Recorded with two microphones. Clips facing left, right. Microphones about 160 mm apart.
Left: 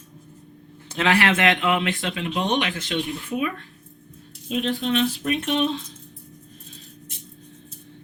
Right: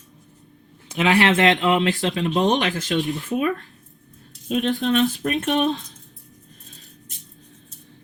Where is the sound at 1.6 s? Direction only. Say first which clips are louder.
Right 4 dB; 40° right (ahead or behind).